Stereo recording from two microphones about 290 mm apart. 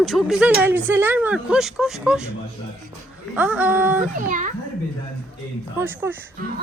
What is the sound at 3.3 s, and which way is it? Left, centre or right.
Speech, centre.